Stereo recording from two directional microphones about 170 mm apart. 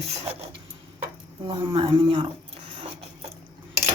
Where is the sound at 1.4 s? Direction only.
30° right (ahead or behind).